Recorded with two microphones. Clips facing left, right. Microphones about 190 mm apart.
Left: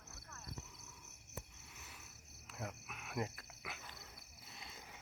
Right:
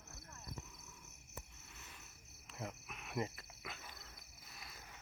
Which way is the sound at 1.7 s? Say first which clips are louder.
Even; 10° left (ahead or behind).